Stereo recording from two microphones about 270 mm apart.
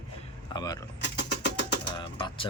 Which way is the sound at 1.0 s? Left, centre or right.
Left.